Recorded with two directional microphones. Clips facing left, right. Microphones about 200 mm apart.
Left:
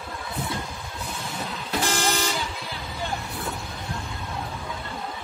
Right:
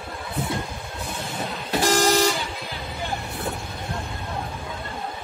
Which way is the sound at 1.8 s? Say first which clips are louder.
Right 8 dB; 40° right (ahead or behind).